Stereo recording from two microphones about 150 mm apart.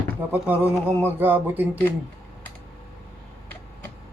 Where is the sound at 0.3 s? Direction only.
10° right (ahead or behind).